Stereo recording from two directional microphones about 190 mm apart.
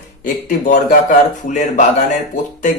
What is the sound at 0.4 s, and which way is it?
A man's voice, 45° left (ahead or behind).